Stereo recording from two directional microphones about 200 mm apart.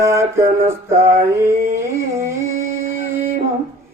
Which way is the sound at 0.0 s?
15° right (ahead or behind).